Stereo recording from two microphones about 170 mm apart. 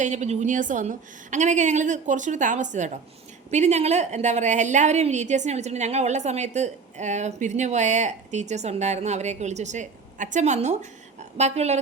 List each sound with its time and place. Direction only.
0.0 s a woman's voice: 45° right (ahead or behind)